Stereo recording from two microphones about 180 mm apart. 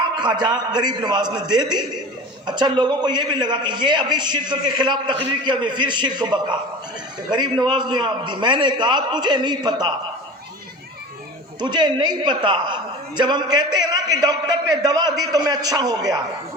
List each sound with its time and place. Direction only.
0.2 s a man's voice: 25° right (ahead or behind)
11.6 s a man's voice: 25° right (ahead or behind)